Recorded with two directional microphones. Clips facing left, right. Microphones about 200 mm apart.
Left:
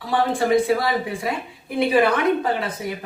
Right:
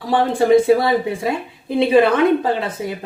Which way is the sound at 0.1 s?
25° right (ahead or behind).